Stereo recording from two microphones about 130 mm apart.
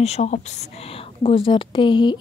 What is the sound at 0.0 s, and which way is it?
Speech, 60° left (ahead or behind).